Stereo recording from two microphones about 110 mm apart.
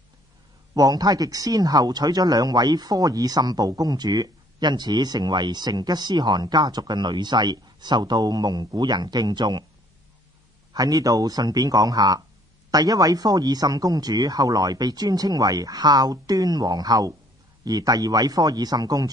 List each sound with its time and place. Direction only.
0.7 s speech: 35° right (ahead or behind)
10.7 s speech: 35° right (ahead or behind)